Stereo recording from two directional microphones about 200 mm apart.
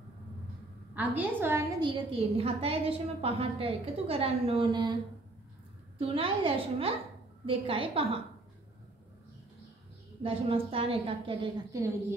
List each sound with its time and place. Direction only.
0.9 s a woman's voice: 10° right (ahead or behind)
1.8 s a woman's voice: 25° right (ahead or behind)
5.9 s a woman's voice: 25° right (ahead or behind)
10.2 s a woman's voice: 25° right (ahead or behind)